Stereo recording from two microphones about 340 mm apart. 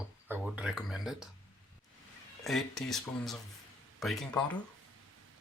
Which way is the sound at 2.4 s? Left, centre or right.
Centre.